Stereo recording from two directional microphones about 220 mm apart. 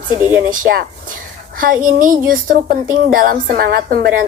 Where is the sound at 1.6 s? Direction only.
40° right (ahead or behind).